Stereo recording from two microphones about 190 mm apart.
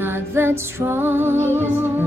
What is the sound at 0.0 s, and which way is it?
Music, 10° right (ahead or behind).